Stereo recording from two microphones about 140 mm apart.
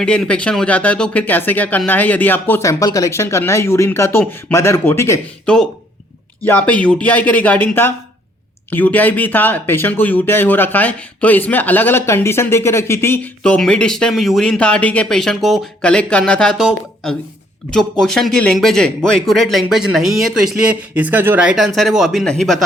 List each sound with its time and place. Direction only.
0.0 s speech: 5° left (ahead or behind)
5.5 s speech: 5° left (ahead or behind)
13.4 s speech: 5° left (ahead or behind)